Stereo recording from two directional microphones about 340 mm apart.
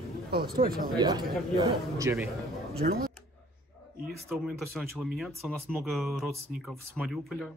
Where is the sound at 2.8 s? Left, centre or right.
Right.